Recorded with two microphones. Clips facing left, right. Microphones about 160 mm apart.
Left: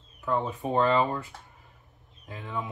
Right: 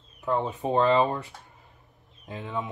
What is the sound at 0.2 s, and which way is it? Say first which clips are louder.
Speech: right 2 dB; 25° right (ahead or behind).